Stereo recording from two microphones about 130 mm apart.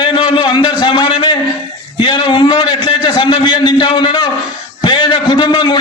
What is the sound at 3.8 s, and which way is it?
Speech, 35° left (ahead or behind).